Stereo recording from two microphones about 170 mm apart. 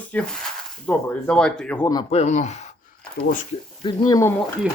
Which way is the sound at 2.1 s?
40° left (ahead or behind).